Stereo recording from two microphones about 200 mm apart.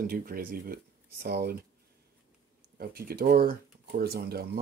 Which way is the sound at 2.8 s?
50° right (ahead or behind).